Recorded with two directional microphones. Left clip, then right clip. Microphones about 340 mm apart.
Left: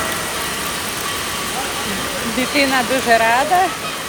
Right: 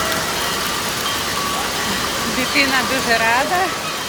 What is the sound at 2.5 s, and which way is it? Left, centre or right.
Speech, centre.